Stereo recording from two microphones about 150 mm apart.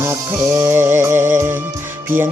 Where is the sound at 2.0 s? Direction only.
15° right (ahead or behind).